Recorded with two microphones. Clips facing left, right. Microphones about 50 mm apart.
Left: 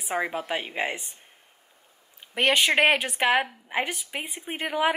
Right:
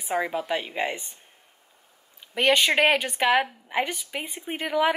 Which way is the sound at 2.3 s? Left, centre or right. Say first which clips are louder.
Right 1 dB; centre.